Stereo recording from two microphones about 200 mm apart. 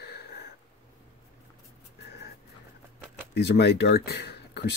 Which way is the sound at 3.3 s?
55° left (ahead or behind).